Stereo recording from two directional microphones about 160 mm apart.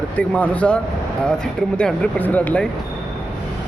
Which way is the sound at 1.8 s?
5° left (ahead or behind).